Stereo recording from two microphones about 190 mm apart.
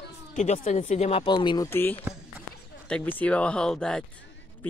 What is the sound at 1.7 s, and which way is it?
Speech, 10° left (ahead or behind).